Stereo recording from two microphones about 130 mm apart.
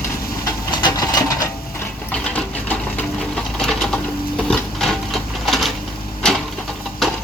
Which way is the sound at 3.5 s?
5° left (ahead or behind).